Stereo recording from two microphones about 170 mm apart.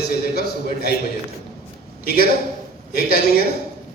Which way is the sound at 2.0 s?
65° left (ahead or behind).